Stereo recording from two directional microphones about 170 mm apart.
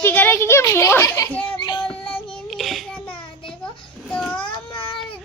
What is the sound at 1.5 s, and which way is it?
Child singing, 25° left (ahead or behind).